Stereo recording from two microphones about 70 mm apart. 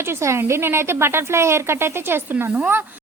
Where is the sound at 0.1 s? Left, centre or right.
Right.